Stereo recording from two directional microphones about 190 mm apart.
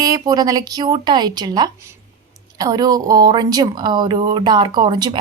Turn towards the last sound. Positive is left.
turn(degrees=-25)  # may be behind; listen again after turning